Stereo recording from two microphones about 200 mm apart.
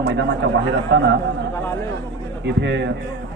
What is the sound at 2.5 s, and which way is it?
Speech, 60° right (ahead or behind).